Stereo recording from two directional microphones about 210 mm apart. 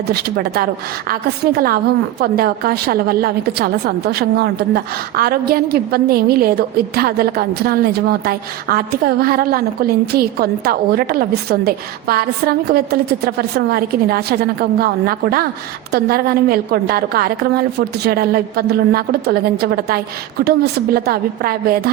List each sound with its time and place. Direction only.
0.1 s a woman's voice: 45° right (ahead or behind)